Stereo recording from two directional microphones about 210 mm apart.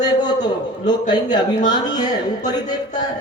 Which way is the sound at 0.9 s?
20° left (ahead or behind).